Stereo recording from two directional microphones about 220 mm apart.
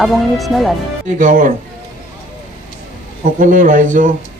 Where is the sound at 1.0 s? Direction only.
35° right (ahead or behind).